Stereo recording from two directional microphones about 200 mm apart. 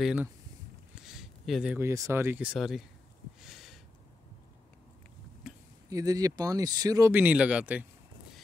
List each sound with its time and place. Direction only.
0.0 s speech: 5° right (ahead or behind)
3.3 s a sound: centre (ahead or behind)
5.9 s speech: 15° right (ahead or behind)